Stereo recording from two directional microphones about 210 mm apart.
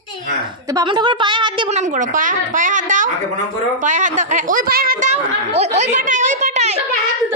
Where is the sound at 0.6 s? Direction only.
20° right (ahead or behind).